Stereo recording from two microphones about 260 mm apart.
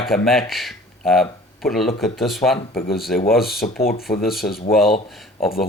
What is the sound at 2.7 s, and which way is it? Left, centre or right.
Speech, left.